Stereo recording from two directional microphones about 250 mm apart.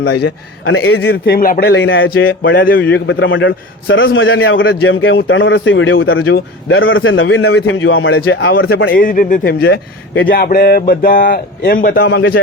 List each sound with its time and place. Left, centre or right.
0.0 s speech: left
0.6 s a man's voice: left
1.0 s speech: left
2.9 s a man's voice: left
8.7 s speech: left